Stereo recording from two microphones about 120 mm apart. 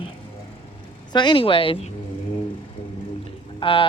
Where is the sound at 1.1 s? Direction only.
40° left (ahead or behind).